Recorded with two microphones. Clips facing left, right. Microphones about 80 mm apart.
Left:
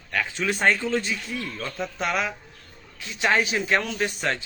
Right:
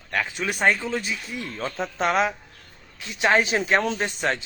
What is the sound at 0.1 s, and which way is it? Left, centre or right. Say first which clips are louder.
Speech: even; centre.